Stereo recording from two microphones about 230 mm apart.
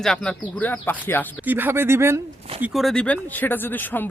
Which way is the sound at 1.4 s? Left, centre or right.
Centre.